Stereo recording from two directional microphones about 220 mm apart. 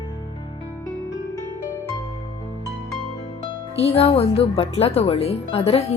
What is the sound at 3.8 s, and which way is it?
Speech, 25° left (ahead or behind).